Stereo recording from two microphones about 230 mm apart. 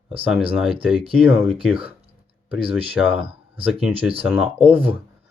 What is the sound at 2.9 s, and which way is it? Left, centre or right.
Speech, centre.